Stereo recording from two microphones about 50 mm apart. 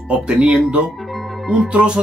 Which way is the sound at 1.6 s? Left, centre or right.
Right.